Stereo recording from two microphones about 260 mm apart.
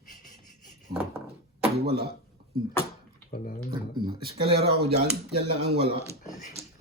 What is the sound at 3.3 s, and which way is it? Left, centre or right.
Speech, left.